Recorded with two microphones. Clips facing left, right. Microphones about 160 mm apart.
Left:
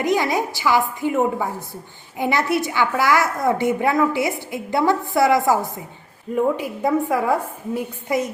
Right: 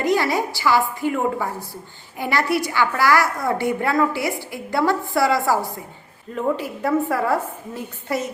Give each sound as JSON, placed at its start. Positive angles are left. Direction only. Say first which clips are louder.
{"t": 0.0, "sound": "a woman's voice", "louder": "even", "side_deg": 20}